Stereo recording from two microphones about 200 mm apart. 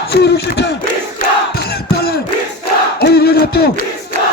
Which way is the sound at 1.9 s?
50° left (ahead or behind).